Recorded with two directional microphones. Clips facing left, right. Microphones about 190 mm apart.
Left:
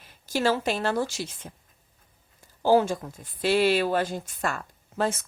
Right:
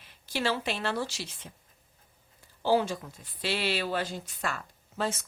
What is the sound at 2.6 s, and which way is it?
A woman's voice, 45° left (ahead or behind).